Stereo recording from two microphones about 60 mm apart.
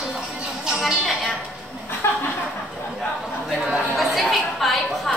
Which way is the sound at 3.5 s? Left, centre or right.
Centre.